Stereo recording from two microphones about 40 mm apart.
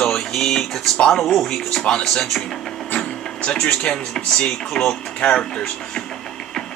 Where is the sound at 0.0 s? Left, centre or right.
Centre.